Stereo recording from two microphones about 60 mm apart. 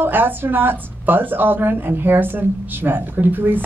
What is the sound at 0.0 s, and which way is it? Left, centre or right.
A woman's voice, right.